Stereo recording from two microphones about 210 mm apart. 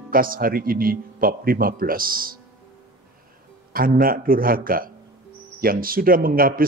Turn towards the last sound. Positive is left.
turn(degrees=-45)  # may be behind; listen again after turning